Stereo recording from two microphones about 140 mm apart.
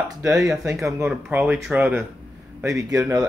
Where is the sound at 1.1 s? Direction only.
10° right (ahead or behind).